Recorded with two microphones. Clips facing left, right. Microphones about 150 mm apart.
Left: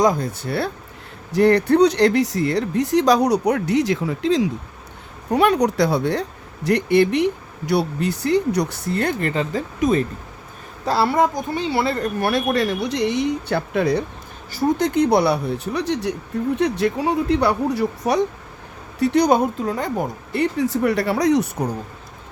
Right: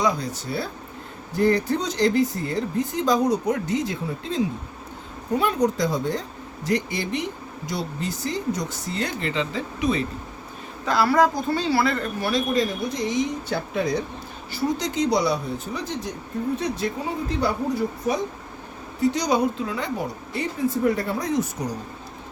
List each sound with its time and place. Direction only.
0.0 s speech: 50° left (ahead or behind); by 4.4 s 90° left
5.3 s speech: 70° left (ahead or behind); by 10.0 s 45° left (ahead or behind)
10.8 s a woman's voice: 30° left (ahead or behind)
12.2 s speech: 60° left (ahead or behind)
14.5 s speech: 50° left (ahead or behind)